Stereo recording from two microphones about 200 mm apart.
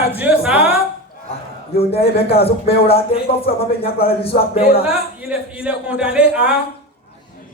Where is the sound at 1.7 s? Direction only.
30° left (ahead or behind).